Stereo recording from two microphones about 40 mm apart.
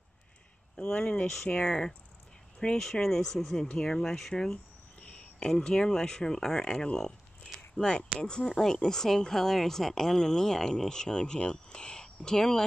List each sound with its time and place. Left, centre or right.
0.9 s speech: left; by 3.6 s centre
3.6 s speech: centre
4.0 s speech: centre
5.0 s a sound: left
5.5 s speech: centre
7.5 s a sound: centre
8.2 s speech: left
8.5 s speech: centre